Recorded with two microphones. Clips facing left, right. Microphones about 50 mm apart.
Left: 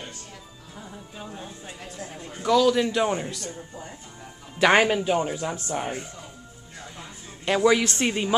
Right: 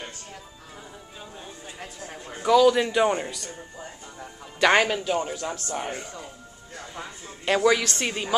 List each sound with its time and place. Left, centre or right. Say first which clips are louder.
2.1 s a man's voice: right 2 dB; centre
4.6 s speech: left 1 dB; centre
7.5 s a woman's voice: right 1 dB; centre
7.8 s a woman's voice: left 3 dB; left